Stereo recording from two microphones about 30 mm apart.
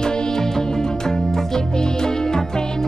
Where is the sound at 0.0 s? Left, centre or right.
Left.